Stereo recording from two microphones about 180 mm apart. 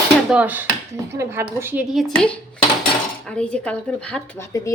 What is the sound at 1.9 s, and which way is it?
Speech, 5° left (ahead or behind).